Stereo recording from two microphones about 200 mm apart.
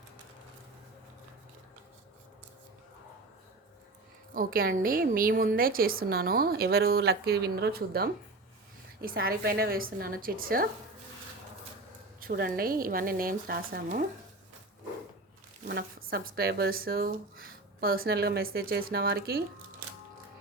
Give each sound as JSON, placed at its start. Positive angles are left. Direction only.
{"t": 4.4, "sound": "a woman's voice", "side_deg": -45}
{"t": 12.2, "sound": "a woman's voice", "side_deg": -45}
{"t": 15.6, "sound": "a woman's voice", "side_deg": -45}